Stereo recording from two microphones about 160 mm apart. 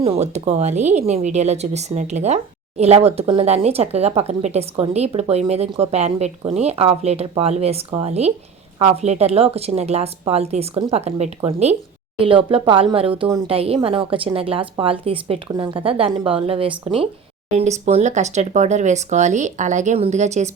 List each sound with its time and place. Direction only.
0.0 s speech: 40° right (ahead or behind)